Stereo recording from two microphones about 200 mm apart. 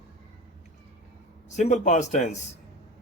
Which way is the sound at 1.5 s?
35° left (ahead or behind).